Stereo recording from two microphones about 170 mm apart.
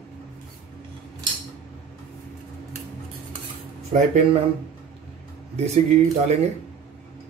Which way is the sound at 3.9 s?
45° right (ahead or behind).